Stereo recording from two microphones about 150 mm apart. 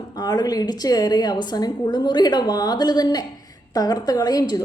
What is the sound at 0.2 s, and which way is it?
A woman's voice, 25° left (ahead or behind).